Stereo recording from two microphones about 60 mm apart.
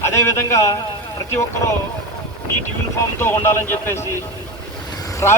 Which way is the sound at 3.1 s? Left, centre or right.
Left.